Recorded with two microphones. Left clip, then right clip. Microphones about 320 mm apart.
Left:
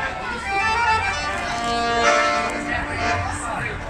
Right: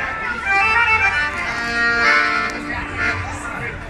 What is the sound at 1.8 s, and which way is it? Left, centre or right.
Music, centre.